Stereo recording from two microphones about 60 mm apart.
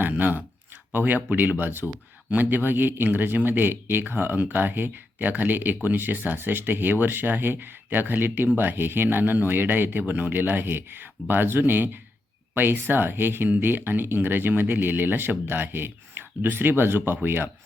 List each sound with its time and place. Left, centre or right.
0.0 s speech: right